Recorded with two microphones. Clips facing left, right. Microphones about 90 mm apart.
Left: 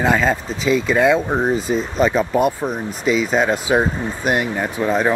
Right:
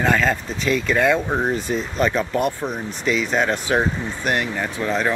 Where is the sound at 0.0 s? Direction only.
10° left (ahead or behind).